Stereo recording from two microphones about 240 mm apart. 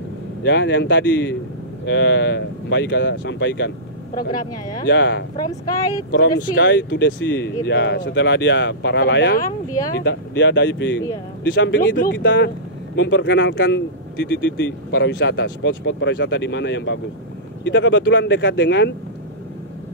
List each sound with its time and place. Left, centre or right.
0.4 s speech: left
4.8 s speech: left
5.3 s speech: centre
6.6 s speech: left
9.7 s speech: centre
10.0 s speech: left